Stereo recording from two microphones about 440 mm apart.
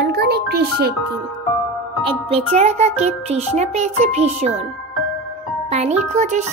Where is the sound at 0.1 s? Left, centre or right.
Right.